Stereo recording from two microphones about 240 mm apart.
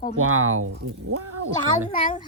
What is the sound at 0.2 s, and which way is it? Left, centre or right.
Speech, right.